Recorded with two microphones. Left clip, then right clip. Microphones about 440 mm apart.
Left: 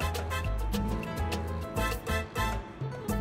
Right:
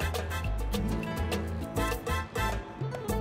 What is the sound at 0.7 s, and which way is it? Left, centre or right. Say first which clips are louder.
Music: right 4 dB; right.